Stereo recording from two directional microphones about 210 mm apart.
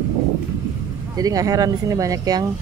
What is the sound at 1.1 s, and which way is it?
Speech, 15° right (ahead or behind).